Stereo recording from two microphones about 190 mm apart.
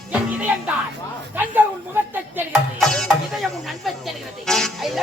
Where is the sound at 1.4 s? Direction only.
10° right (ahead or behind).